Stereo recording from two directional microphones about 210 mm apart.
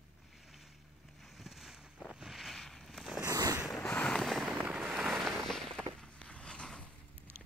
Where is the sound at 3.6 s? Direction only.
5° left (ahead or behind).